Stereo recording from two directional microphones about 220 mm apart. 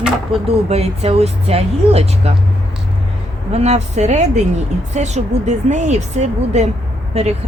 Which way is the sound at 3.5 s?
30° right (ahead or behind).